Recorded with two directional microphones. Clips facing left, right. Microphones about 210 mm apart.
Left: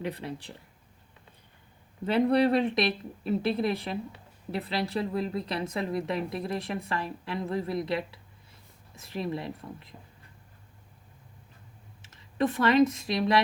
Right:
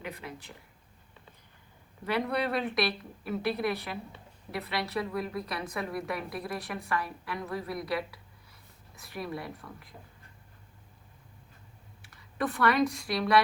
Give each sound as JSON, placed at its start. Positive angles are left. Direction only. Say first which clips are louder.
{"t": 0.0, "sound": "speech", "louder": "left 6 dB", "side_deg": 35}
{"t": 2.0, "sound": "a woman's voice", "louder": "left 7 dB", "side_deg": 30}
{"t": 12.0, "sound": "speech", "louder": "left 5 dB", "side_deg": 20}